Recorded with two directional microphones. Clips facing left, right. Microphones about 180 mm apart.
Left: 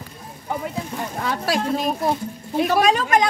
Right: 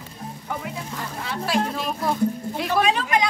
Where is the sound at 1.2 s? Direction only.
45° left (ahead or behind).